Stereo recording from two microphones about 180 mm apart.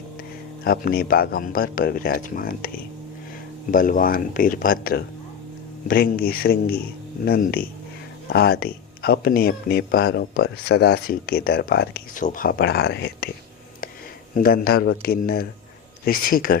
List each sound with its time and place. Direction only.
0.6 s speech: 55° left (ahead or behind)
14.3 s speech: 55° left (ahead or behind)